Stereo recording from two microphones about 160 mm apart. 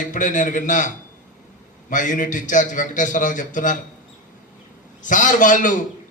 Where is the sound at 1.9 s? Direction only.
55° left (ahead or behind).